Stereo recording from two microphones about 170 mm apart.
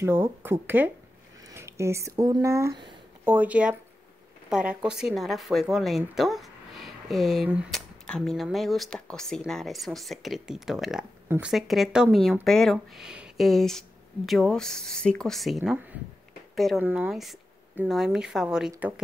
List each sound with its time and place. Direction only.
0.0 s speech: 15° right (ahead or behind)
11.2 s speech: 15° right (ahead or behind)
11.5 s speech: centre (ahead or behind)